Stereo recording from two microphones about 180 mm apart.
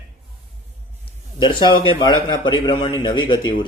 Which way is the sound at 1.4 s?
25° left (ahead or behind).